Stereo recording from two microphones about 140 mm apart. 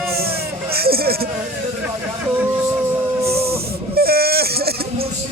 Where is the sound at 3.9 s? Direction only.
90° right.